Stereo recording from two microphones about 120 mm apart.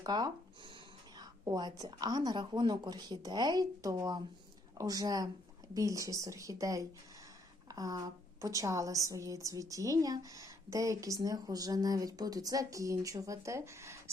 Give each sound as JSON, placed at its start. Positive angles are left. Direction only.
{"t": 0.0, "sound": "a woman's voice", "side_deg": -35}